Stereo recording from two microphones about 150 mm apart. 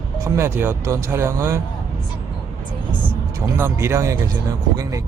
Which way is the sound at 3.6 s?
20° right (ahead or behind).